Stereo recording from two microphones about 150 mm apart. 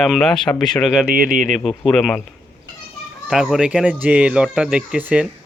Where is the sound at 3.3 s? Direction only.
5° right (ahead or behind).